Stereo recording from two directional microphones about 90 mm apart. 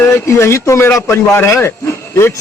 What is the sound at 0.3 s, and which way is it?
Speech, 30° left (ahead or behind).